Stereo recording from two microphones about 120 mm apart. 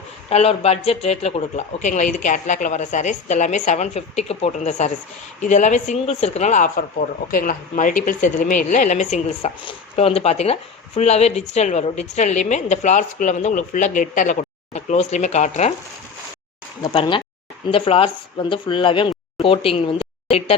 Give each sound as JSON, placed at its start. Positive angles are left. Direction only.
{"t": 0.3, "sound": "speech", "side_deg": 60}
{"t": 5.4, "sound": "speech", "side_deg": 90}
{"t": 7.8, "sound": "speech", "side_deg": 90}
{"t": 9.6, "sound": "speech", "side_deg": 50}
{"t": 16.8, "sound": "speech", "side_deg": 45}